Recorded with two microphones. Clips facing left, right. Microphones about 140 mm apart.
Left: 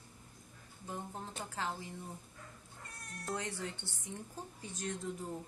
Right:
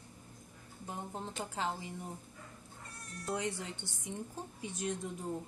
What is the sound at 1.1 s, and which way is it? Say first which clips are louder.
Speech: right 3 dB; 20° right (ahead or behind).